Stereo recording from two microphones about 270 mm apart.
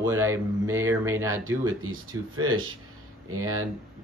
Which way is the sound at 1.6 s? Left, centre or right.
Right.